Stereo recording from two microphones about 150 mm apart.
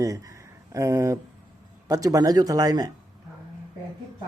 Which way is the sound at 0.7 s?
20° right (ahead or behind).